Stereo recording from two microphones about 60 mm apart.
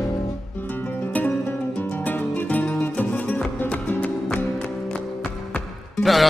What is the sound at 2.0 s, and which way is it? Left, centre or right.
Music, left.